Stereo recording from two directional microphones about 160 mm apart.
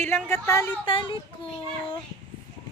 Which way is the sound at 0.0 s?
15° left (ahead or behind).